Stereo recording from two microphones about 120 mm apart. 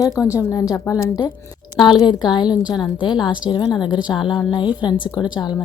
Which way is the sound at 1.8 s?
35° left (ahead or behind).